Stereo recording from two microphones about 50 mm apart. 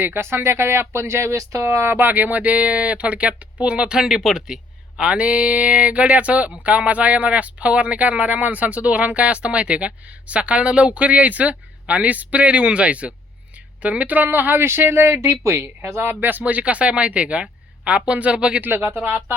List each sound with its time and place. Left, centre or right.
0.0 s speech: right; by 4.6 s centre
4.9 s speech: right
15.2 s speech: right
16.4 s speech: right
18.7 s speech: right